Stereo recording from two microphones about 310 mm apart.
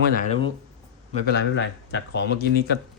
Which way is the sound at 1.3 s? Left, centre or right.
Left.